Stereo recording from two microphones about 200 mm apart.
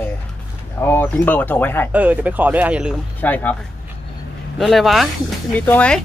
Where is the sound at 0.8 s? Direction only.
10° left (ahead or behind).